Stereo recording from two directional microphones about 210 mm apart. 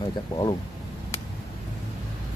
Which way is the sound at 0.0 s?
20° left (ahead or behind).